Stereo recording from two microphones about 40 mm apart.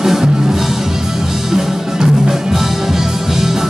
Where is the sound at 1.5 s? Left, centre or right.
Centre.